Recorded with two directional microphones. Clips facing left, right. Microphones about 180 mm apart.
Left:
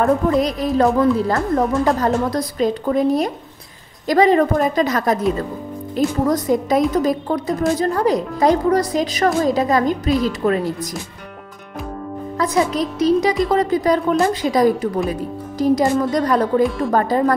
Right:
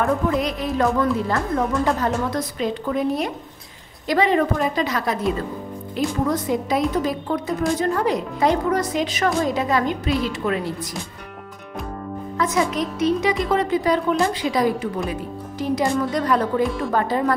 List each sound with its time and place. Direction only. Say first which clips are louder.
0.0 s a woman's voice: left 4 dB; 35° left (ahead or behind)
12.4 s a woman's voice: left 3 dB; 35° left (ahead or behind)
16.6 s speech: left 4 dB; centre (ahead or behind)
16.9 s a woman's voice: left 3 dB; 45° left (ahead or behind)